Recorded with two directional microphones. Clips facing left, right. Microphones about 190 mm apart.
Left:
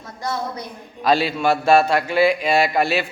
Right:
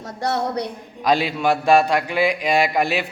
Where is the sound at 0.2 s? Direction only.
70° right (ahead or behind).